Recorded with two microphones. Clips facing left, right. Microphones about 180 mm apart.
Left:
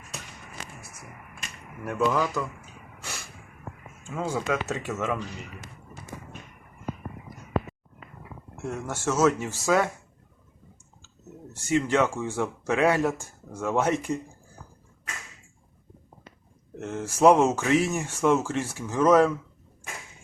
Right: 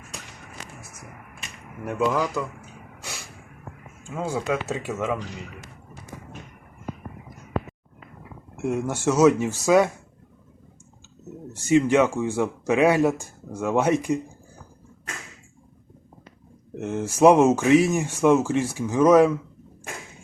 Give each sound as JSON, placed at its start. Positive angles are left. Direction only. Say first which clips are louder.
{"t": 1.8, "sound": "speech", "louder": "right 2 dB", "side_deg": -20}
{"t": 2.1, "sound": "speech", "louder": "right 1 dB", "side_deg": 0}
{"t": 4.1, "sound": "speech", "louder": "right 2 dB", "side_deg": -15}
{"t": 8.6, "sound": "speech", "louder": "right 6 dB", "side_deg": -15}
{"t": 11.7, "sound": "speech", "louder": "right 5 dB", "side_deg": -15}
{"t": 16.8, "sound": "speech", "louder": "right 3 dB", "side_deg": -15}